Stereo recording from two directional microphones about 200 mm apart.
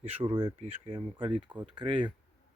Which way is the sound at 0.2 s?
25° right (ahead or behind).